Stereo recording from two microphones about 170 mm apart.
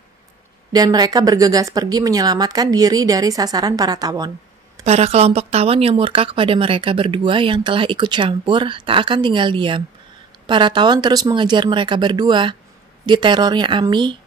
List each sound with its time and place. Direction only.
0.7 s speech: 25° right (ahead or behind)
4.8 s speech: 40° right (ahead or behind)